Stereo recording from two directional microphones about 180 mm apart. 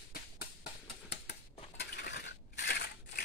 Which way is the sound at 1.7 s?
70° left (ahead or behind).